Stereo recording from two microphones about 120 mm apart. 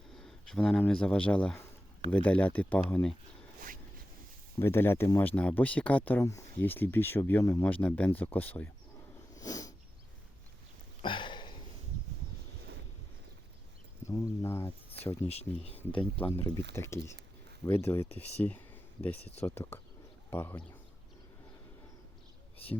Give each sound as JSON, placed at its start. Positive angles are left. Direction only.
{"t": 0.2, "sound": "speech", "side_deg": 5}
{"t": 4.6, "sound": "speech", "side_deg": 20}
{"t": 5.2, "sound": "speech", "side_deg": 15}
{"t": 9.3, "sound": "sneeze", "side_deg": 30}
{"t": 11.0, "sound": "a sound", "side_deg": 40}
{"t": 14.1, "sound": "a sound", "side_deg": 20}
{"t": 15.3, "sound": "speech", "side_deg": 60}
{"t": 15.9, "sound": "speech", "side_deg": 45}
{"t": 16.2, "sound": "speech", "side_deg": 20}